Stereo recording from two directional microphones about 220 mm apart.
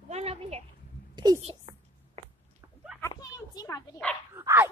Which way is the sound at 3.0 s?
15° left (ahead or behind).